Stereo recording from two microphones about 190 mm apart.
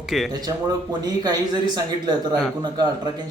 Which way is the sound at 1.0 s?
20° right (ahead or behind).